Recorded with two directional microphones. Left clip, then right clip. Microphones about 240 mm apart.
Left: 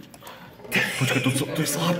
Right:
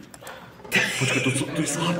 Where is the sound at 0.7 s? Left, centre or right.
Centre.